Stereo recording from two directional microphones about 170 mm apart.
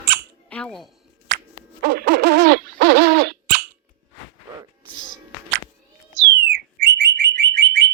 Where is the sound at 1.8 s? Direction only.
70° right (ahead or behind).